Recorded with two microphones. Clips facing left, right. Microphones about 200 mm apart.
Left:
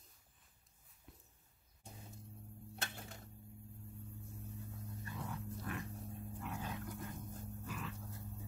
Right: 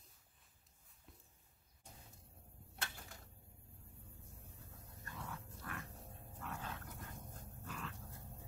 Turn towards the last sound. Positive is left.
turn(degrees=5)  # may be behind; listen again after turning